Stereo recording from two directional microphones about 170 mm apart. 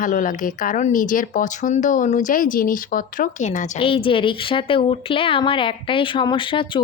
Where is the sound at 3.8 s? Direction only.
30° left (ahead or behind).